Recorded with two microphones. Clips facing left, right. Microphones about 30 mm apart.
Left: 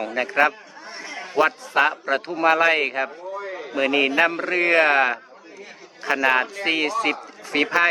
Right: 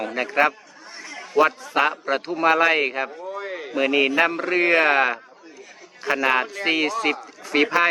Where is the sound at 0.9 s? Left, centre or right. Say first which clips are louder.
Left 2 dB; left.